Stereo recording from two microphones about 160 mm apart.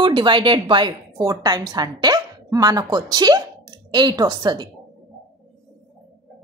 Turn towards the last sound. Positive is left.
turn(degrees=-25)  # may be behind; listen again after turning